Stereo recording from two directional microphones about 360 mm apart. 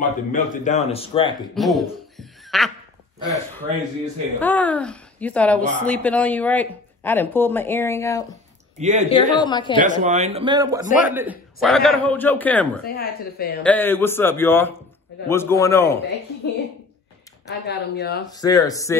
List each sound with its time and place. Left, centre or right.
0.0 s speech: left
1.5 s speech: centre
4.4 s a woman's voice: centre
8.7 s speech: centre
9.1 s speech: centre
9.8 s a man's voice: centre
12.8 s speech: left
13.6 s a woman's voice: centre
17.5 s speech: left
18.3 s speech: centre